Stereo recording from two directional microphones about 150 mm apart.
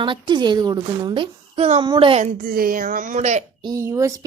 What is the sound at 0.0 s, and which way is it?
A child's voice, 30° right (ahead or behind).